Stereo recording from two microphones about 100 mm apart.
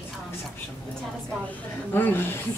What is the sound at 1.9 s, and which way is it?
Speech, 20° left (ahead or behind).